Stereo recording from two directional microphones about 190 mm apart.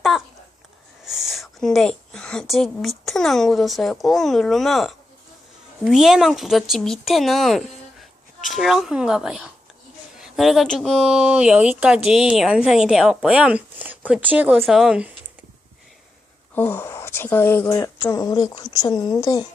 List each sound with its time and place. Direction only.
1.0 s a woman's voice: centre (ahead or behind)
16.6 s speech: 10° left (ahead or behind)